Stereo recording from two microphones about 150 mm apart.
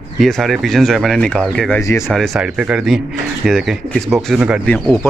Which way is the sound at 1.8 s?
20° left (ahead or behind).